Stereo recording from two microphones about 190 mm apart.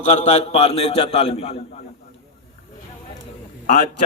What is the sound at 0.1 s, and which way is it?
A man's voice, 35° left (ahead or behind).